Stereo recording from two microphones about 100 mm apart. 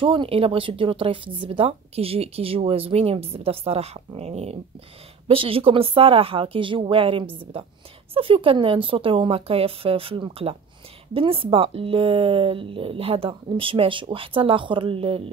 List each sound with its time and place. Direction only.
0.0 s speech: 60° right (ahead or behind); by 4.6 s 90° right
5.3 s speech: 65° right (ahead or behind)
10.4 s speech: 90° right
11.1 s speech: 65° right (ahead or behind)